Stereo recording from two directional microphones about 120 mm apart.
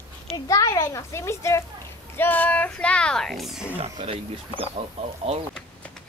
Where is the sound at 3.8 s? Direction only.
55° right (ahead or behind).